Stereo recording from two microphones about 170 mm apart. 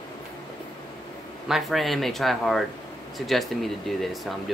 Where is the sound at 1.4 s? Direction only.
Centre (ahead or behind).